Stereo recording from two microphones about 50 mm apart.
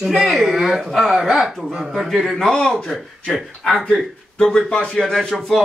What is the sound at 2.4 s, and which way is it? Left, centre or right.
A man's voice, centre.